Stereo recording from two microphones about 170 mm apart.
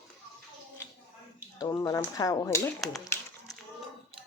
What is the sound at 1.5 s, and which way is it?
Speech, 20° left (ahead or behind).